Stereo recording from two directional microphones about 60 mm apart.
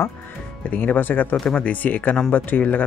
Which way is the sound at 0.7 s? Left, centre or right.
Left.